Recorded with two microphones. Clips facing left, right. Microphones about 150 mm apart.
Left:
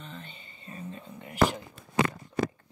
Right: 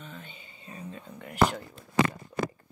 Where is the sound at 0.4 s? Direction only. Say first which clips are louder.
Left 1 dB; 10° right (ahead or behind).